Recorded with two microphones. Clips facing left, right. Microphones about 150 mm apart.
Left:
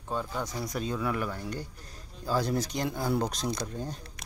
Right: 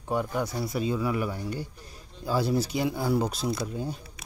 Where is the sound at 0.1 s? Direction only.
15° right (ahead or behind).